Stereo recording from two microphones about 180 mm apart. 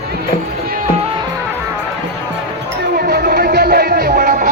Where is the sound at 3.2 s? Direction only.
45° right (ahead or behind).